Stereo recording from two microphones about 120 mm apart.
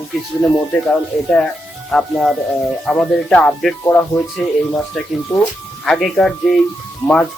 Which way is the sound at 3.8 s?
20° left (ahead or behind).